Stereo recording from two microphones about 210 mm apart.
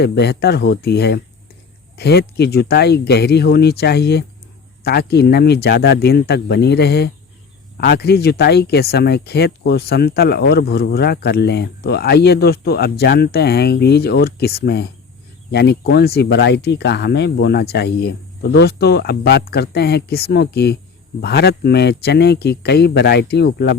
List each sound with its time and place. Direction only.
0.0 s speech: 50° left (ahead or behind)